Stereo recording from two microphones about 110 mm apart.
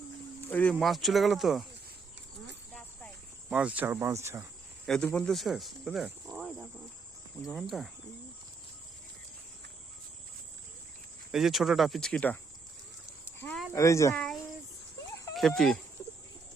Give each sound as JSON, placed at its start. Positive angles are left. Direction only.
{"t": 0.4, "sound": "speech", "side_deg": 15}
{"t": 0.7, "sound": "speech", "side_deg": 0}
{"t": 3.5, "sound": "speech", "side_deg": -10}
{"t": 4.0, "sound": "speech", "side_deg": -25}
{"t": 4.9, "sound": "speech", "side_deg": 10}
{"t": 11.3, "sound": "speech", "side_deg": -5}
{"t": 13.7, "sound": "speech", "side_deg": 30}
{"t": 14.1, "sound": "a sound", "side_deg": 5}
{"t": 15.4, "sound": "speech", "side_deg": 5}